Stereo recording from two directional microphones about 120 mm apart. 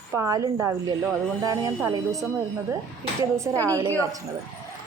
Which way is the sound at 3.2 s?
25° right (ahead or behind).